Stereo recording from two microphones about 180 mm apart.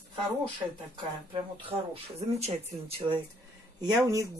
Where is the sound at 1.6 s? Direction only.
30° right (ahead or behind).